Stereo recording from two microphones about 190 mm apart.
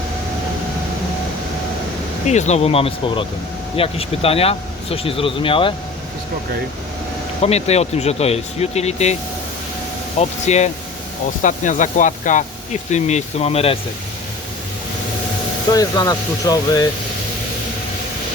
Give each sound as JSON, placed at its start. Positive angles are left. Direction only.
{"t": 2.2, "sound": "speech", "side_deg": 40}
{"t": 7.4, "sound": "speech", "side_deg": 35}
{"t": 10.2, "sound": "speech", "side_deg": 35}
{"t": 15.7, "sound": "speech", "side_deg": 20}